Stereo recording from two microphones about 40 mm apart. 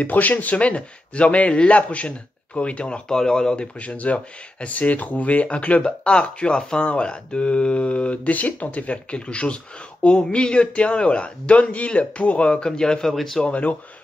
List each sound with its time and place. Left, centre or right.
0.0 s speech: left
3.1 s speech: centre
3.8 s speech: left
12.6 s speech: centre
13.4 s speech: left